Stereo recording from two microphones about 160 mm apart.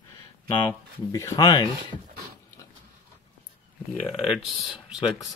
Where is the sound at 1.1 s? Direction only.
25° left (ahead or behind).